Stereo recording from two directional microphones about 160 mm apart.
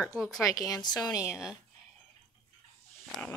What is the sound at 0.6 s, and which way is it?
Speech, 25° left (ahead or behind).